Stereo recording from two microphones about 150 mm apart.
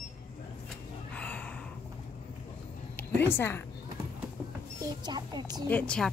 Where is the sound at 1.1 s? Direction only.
10° left (ahead or behind).